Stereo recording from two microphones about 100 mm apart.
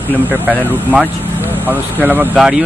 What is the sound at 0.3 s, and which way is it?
Speech, 15° right (ahead or behind).